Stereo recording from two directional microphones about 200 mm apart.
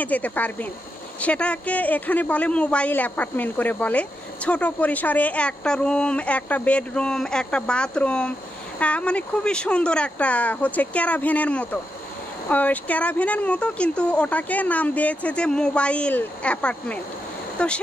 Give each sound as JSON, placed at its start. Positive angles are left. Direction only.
{"t": 0.0, "sound": "speech", "side_deg": 5}